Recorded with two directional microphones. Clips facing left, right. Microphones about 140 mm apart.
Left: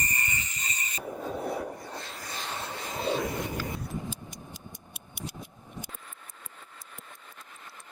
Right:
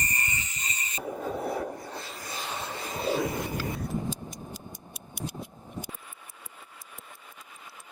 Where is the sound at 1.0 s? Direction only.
5° right (ahead or behind).